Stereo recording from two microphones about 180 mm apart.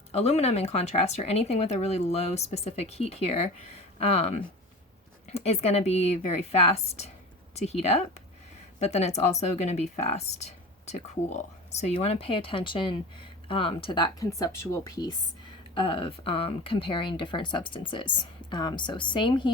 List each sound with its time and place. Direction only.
0.1 s speech: 35° left (ahead or behind)